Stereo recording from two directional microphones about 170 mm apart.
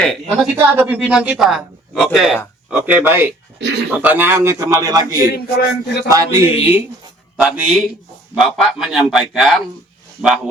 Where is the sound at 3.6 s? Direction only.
90° right.